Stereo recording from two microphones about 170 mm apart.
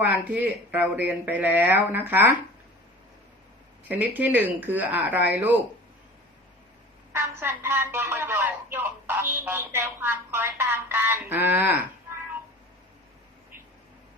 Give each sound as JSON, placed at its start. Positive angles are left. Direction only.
{"t": 0.0, "sound": "speech", "side_deg": -10}
{"t": 3.8, "sound": "speech", "side_deg": -10}
{"t": 7.1, "sound": "speech", "side_deg": -15}